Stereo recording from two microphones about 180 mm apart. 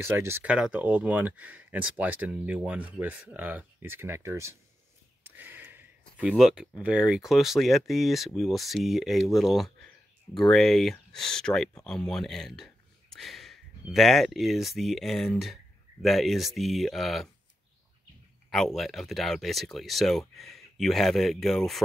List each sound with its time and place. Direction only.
0.0 s speech: 15° right (ahead or behind)
18.5 s speech: centre (ahead or behind)